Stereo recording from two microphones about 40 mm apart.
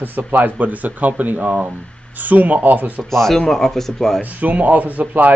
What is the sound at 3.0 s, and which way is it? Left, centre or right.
Speech, centre.